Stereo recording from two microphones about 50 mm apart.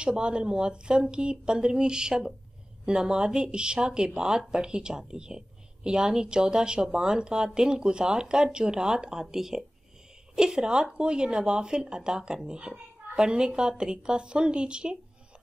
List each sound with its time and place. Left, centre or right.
0.0 s a woman's voice: centre